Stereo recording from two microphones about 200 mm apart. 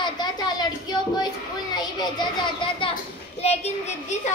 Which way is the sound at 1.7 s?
20° left (ahead or behind).